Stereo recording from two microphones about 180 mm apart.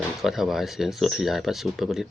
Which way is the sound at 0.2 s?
Centre (ahead or behind).